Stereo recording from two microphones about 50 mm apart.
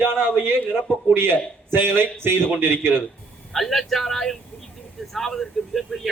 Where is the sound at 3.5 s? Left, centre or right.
Centre.